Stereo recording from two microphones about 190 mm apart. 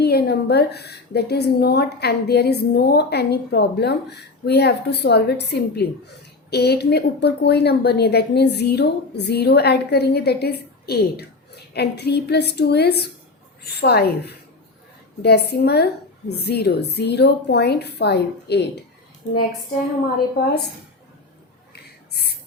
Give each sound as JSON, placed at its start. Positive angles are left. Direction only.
{"t": 0.0, "sound": "a woman's voice", "side_deg": 55}
{"t": 15.2, "sound": "a woman's voice", "side_deg": 60}